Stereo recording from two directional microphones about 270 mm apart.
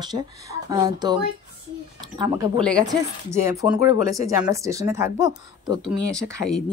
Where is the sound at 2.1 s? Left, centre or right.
Centre.